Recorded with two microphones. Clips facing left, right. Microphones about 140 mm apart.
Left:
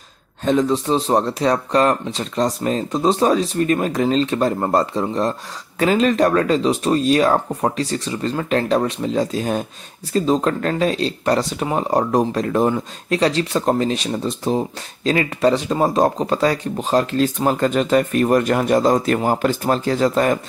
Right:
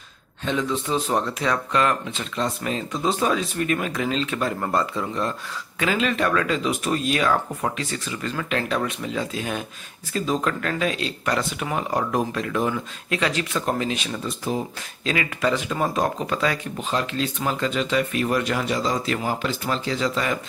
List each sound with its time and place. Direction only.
0.5 s speech: 40° left (ahead or behind)